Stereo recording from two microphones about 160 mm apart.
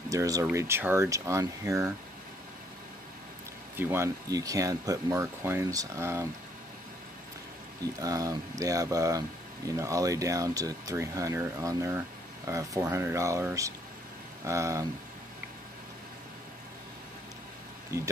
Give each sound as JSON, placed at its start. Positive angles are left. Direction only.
{"t": 0.1, "sound": "speech", "side_deg": -20}
{"t": 3.7, "sound": "speech", "side_deg": -15}
{"t": 8.0, "sound": "speech", "side_deg": -20}
{"t": 17.9, "sound": "speech", "side_deg": -15}